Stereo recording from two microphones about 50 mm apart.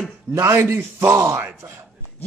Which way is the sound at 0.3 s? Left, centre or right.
Right.